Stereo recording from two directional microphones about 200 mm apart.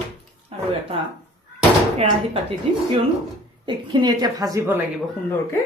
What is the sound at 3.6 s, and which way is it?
A woman's voice, 25° right (ahead or behind).